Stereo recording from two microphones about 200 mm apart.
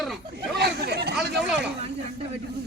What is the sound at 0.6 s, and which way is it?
Speech, 55° right (ahead or behind).